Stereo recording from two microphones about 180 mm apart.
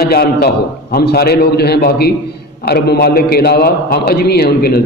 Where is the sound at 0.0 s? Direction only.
60° left (ahead or behind).